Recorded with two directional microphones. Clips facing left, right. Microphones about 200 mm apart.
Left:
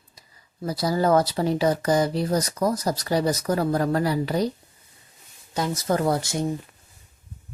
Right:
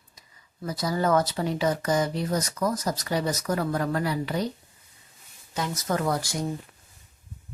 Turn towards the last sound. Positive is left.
turn(degrees=25)  # may be behind; listen again after turning